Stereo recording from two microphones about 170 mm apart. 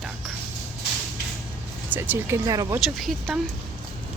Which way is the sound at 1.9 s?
10° right (ahead or behind).